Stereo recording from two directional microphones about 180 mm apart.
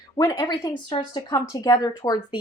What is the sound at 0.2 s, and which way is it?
Speech, 20° left (ahead or behind).